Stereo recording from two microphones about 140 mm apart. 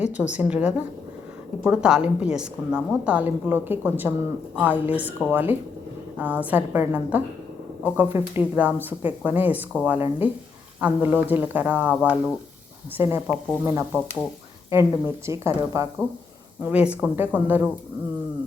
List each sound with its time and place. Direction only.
0.0 s a woman's voice: 10° right (ahead or behind)
16.6 s a woman's voice: 10° right (ahead or behind)